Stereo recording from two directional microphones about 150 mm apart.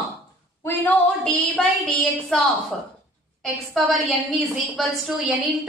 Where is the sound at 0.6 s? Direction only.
10° left (ahead or behind).